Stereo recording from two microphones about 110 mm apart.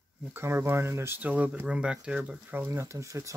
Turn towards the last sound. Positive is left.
turn(degrees=-30)  # may be behind; listen again after turning